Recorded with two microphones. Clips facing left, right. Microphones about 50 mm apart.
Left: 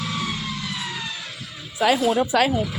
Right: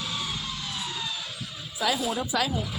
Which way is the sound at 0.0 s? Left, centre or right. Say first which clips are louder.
Left 5 dB; left.